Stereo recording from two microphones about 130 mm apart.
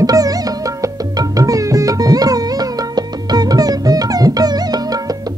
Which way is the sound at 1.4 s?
25° right (ahead or behind).